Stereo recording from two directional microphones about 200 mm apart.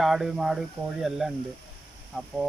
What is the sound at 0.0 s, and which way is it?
Speech, centre (ahead or behind).